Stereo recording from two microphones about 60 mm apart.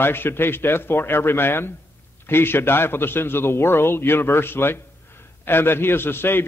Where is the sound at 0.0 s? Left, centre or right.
Left.